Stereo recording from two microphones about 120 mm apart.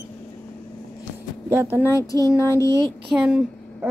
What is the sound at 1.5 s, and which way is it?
Speech, 20° right (ahead or behind).